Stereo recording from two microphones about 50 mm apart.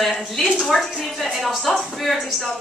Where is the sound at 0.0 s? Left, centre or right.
Centre.